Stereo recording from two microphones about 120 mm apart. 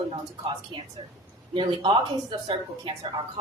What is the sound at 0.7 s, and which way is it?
A woman's voice, 45° right (ahead or behind).